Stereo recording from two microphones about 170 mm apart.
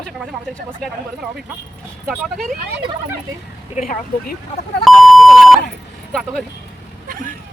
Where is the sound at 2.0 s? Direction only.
Centre (ahead or behind).